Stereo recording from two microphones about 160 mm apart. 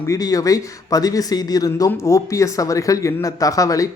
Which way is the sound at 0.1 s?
20° left (ahead or behind).